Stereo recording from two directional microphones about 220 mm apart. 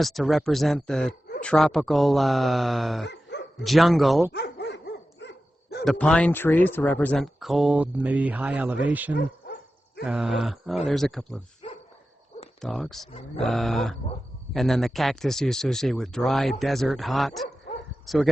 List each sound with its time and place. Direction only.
0.0 s speech: centre (ahead or behind)
3.1 s dog: 50° left (ahead or behind)
3.6 s speech: centre (ahead or behind)
4.3 s dog: 50° left (ahead or behind)
5.8 s speech: 5° left (ahead or behind)
9.1 s dog: 45° left (ahead or behind)
10.0 s speech: 5° right (ahead or behind)
12.6 s speech: centre (ahead or behind)